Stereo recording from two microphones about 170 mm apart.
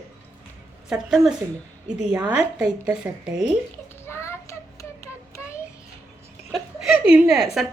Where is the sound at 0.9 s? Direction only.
5° right (ahead or behind).